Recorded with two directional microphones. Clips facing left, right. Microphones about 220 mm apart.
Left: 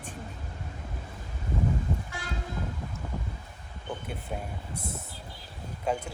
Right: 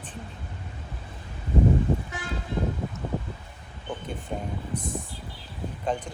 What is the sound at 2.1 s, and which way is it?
Vehicle, 20° right (ahead or behind).